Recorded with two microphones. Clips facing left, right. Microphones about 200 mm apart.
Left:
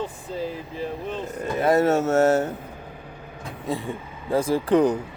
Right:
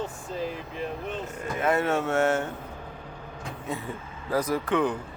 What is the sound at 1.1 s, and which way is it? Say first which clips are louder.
Speech: left 5 dB; 35° left (ahead or behind).